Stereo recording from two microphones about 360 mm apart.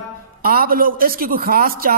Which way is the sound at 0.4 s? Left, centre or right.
Right.